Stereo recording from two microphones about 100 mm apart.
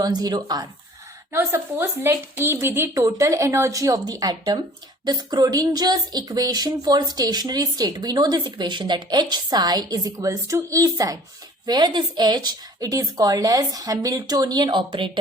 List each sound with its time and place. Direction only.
0.0 s speech: 45° right (ahead or behind)
1.3 s a woman's voice: 25° right (ahead or behind); by 15.2 s 55° right (ahead or behind)